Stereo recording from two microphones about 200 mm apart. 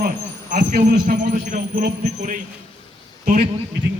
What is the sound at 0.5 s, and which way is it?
A man's voice, 50° right (ahead or behind).